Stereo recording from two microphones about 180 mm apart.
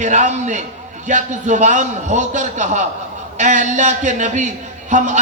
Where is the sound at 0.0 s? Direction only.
40° right (ahead or behind).